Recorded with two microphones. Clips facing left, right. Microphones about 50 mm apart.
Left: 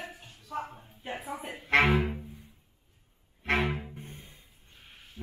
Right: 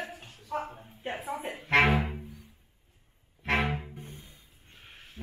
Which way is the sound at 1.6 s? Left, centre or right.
Right.